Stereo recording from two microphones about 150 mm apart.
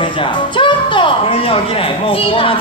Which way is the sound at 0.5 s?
35° left (ahead or behind).